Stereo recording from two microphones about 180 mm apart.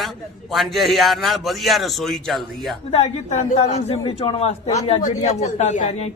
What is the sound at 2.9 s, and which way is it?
A man's voice, 35° left (ahead or behind).